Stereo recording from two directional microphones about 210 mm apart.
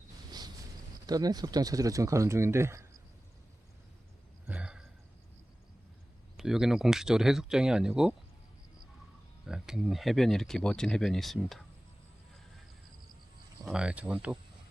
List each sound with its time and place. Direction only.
0.3 s a sound: 20° right (ahead or behind)
1.0 s speech: 20° right (ahead or behind)
4.4 s a sound: 5° right (ahead or behind)
6.3 s speech: centre (ahead or behind)
9.5 s speech: centre (ahead or behind)
13.7 s speech: 5° right (ahead or behind)